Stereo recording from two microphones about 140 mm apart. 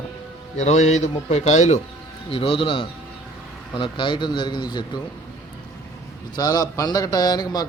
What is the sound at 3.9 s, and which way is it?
Speech, 35° left (ahead or behind).